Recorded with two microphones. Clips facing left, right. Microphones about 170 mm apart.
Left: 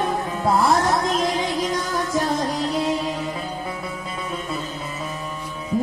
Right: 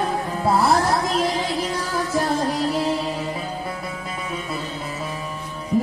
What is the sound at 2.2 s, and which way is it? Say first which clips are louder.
Music: right 3 dB; 10° right (ahead or behind).